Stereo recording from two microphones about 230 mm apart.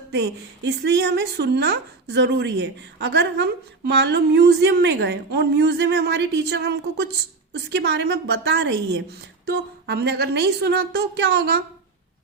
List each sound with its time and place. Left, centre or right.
0.1 s a woman's voice: right